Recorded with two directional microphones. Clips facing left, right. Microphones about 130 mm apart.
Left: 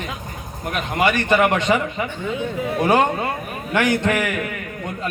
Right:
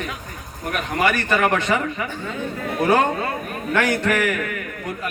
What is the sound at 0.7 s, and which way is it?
A man's voice, 20° left (ahead or behind).